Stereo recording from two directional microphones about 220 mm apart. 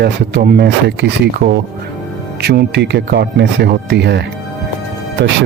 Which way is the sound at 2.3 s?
45° right (ahead or behind).